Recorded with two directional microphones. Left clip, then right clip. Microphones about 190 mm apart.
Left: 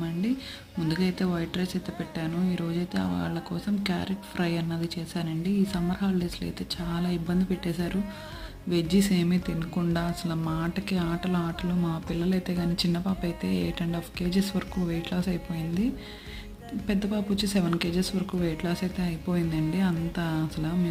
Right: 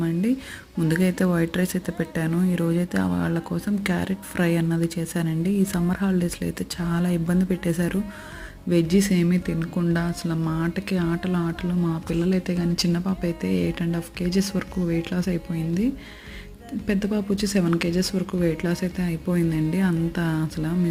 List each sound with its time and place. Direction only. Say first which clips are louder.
0.9 s speech: right 6 dB; 35° right (ahead or behind); by 11.9 s 5° right (ahead or behind)
12.1 s speech: right 6 dB; 20° right (ahead or behind)